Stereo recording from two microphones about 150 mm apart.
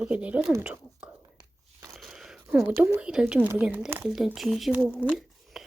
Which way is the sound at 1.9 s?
Centre (ahead or behind).